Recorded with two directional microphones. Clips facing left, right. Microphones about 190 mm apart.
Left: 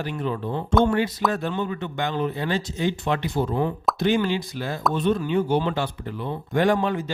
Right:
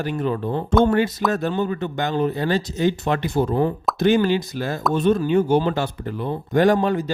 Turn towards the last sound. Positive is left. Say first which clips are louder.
# right 4 dB
turn(degrees=-40)  # may be behind; listen again after turning